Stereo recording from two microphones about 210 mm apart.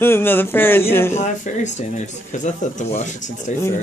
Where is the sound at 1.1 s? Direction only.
35° left (ahead or behind).